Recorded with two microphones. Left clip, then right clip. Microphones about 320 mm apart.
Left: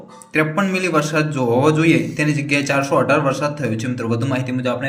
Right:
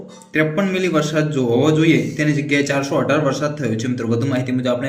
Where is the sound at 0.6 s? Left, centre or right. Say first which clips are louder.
Even; centre.